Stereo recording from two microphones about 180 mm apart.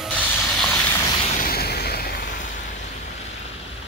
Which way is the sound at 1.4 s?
60° left (ahead or behind).